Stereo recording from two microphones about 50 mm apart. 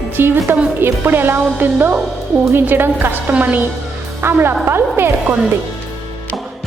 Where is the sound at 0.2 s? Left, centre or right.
Right.